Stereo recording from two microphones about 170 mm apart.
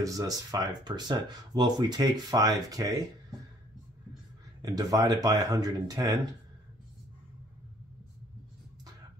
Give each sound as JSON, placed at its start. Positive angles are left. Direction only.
{"t": 0.0, "sound": "speech", "side_deg": -20}
{"t": 4.6, "sound": "speech", "side_deg": -20}